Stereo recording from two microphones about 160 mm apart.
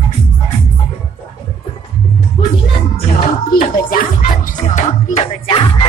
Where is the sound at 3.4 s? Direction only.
60° left (ahead or behind).